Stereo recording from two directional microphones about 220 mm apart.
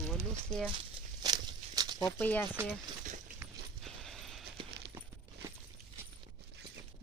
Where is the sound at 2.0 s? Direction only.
5° left (ahead or behind).